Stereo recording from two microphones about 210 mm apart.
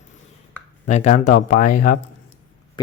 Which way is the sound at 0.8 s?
35° left (ahead or behind).